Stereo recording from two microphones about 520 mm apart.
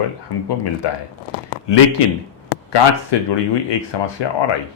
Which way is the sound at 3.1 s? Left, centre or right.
Left.